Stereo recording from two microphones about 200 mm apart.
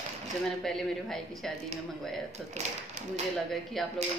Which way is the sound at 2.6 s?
35° right (ahead or behind).